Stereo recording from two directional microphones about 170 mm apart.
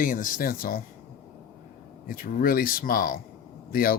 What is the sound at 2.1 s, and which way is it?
A man's voice, 55° left (ahead or behind).